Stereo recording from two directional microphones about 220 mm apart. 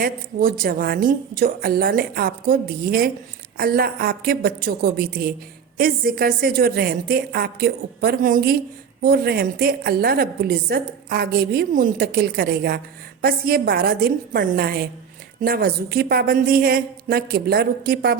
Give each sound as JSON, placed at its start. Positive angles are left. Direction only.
{"t": 0.0, "sound": "a woman's voice", "side_deg": -40}